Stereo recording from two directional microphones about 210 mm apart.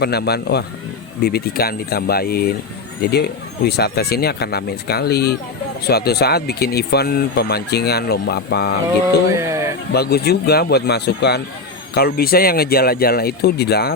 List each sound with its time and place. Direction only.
0.0 s speech: 50° left (ahead or behind)
9.5 s a sound: 15° right (ahead or behind)
9.9 s speech: 50° left (ahead or behind)